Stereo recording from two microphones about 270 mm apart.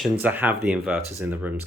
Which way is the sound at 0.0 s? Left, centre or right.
Centre.